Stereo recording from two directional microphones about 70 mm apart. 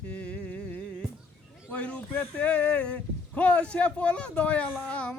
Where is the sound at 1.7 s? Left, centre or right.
Centre.